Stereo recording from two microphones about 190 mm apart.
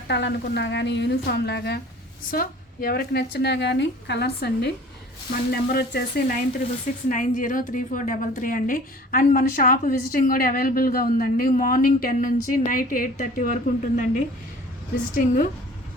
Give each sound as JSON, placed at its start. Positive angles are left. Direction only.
{"t": 0.1, "sound": "a woman's voice", "side_deg": 65}
{"t": 7.1, "sound": "a woman's voice", "side_deg": 45}